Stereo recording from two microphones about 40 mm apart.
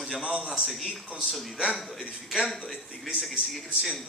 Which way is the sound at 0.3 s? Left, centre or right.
Centre.